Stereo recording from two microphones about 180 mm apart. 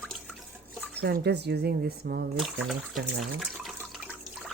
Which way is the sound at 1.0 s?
65° right (ahead or behind).